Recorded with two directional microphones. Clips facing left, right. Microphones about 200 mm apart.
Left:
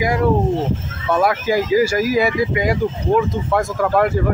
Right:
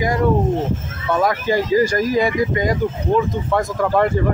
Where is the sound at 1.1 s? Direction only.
10° left (ahead or behind).